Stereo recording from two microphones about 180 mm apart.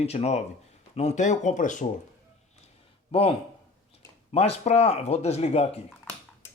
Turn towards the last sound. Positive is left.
turn(degrees=35)  # may be behind; listen again after turning